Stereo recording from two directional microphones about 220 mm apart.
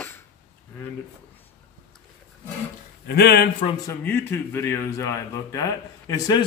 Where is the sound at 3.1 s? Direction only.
45° left (ahead or behind).